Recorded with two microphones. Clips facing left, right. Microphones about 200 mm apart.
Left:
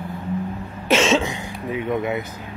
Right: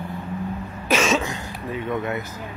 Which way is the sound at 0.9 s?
25° left (ahead or behind).